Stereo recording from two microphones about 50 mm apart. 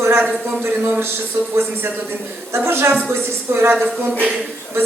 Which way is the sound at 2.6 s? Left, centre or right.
Right.